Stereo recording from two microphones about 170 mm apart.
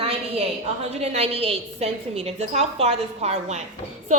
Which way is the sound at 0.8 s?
40° right (ahead or behind).